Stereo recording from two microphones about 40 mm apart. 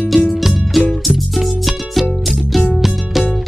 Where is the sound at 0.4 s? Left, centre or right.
Centre.